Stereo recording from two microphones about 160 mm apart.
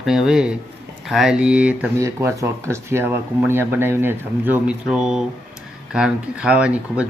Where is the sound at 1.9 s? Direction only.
20° right (ahead or behind).